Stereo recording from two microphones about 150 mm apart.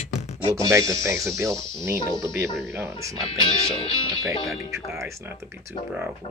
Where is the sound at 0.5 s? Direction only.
20° right (ahead or behind).